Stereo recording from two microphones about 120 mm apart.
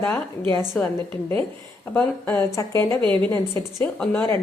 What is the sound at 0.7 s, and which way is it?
A woman's voice, 10° left (ahead or behind).